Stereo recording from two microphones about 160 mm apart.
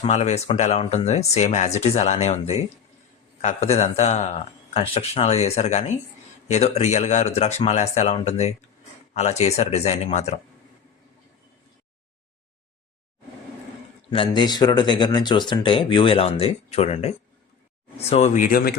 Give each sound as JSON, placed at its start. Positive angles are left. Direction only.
{"t": 0.0, "sound": "speech", "side_deg": 45}
{"t": 14.1, "sound": "speech", "side_deg": 30}